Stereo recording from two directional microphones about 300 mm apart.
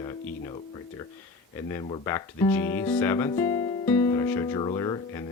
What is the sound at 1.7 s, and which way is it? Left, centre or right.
Speech, centre.